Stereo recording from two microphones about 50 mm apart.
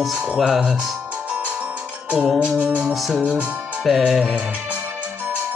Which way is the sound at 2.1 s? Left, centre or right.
Centre.